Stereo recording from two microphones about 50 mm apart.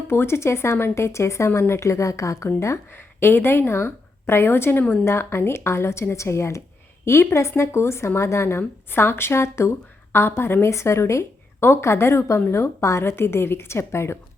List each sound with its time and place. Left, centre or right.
0.1 s a woman's voice: left
3.2 s a woman's voice: left
7.0 s speech: left